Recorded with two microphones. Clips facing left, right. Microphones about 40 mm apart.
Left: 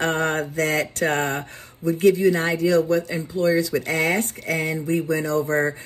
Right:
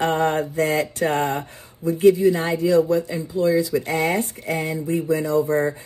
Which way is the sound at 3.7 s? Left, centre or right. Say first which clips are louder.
Even; left.